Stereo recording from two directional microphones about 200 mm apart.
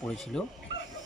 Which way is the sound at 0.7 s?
60° left (ahead or behind).